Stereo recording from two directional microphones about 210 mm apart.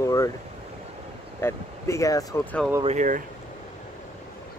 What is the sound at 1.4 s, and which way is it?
Speech, 15° left (ahead or behind).